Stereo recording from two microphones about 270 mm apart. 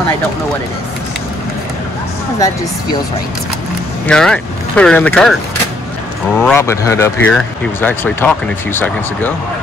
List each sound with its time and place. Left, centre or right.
2.3 s speech: centre
4.1 s speech: centre
6.4 s speech: centre